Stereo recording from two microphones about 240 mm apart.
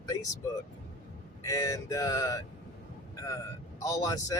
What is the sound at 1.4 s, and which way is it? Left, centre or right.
Speech, centre.